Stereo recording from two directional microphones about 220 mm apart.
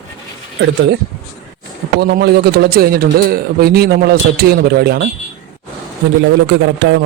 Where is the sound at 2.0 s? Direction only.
50° right (ahead or behind).